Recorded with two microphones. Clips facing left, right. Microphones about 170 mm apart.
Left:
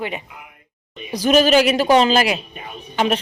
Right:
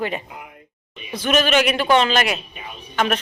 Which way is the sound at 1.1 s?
35° left (ahead or behind).